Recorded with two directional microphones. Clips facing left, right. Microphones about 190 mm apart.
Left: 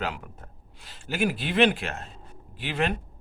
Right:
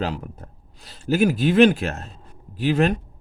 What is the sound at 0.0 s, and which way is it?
A man's voice, 35° right (ahead or behind).